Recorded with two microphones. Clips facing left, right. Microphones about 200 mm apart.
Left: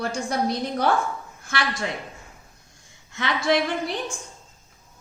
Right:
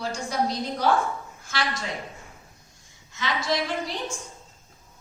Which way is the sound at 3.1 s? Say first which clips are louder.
Left 5 dB; 60° left (ahead or behind).